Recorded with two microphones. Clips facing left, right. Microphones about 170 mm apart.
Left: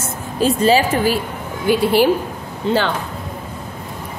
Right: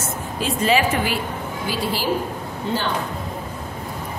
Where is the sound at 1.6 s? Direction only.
60° left (ahead or behind).